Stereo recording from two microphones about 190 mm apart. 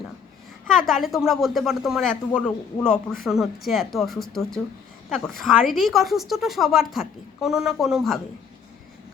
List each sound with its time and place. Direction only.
0.7 s speech: centre (ahead or behind)